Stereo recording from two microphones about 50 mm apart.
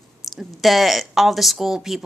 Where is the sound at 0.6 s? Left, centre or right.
Centre.